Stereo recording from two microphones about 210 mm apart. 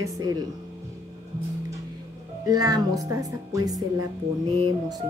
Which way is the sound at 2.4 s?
15° right (ahead or behind).